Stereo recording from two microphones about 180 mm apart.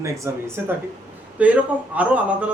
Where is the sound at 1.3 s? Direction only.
10° right (ahead or behind).